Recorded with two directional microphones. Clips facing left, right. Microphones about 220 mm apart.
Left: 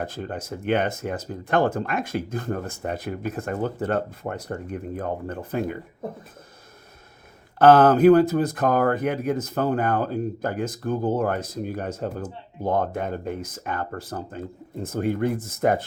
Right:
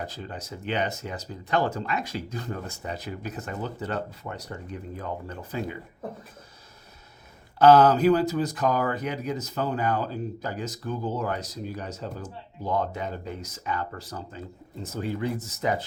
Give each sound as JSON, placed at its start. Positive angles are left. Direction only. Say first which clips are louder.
{"t": 0.0, "sound": "speech", "louder": "left 6 dB", "side_deg": 55}
{"t": 7.6, "sound": "speech", "louder": "left 3 dB", "side_deg": 50}